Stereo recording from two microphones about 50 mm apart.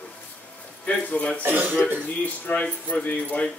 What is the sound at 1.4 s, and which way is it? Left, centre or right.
Speech, right.